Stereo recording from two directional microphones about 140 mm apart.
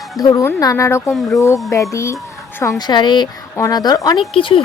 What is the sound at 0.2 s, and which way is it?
Speech, 25° left (ahead or behind).